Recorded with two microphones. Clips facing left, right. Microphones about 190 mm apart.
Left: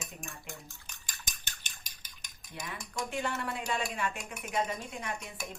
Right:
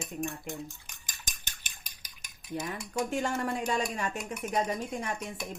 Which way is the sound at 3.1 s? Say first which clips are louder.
Right 3 dB; 45° right (ahead or behind).